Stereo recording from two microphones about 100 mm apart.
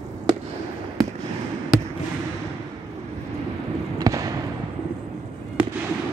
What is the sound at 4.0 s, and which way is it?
Fireworks, 35° right (ahead or behind).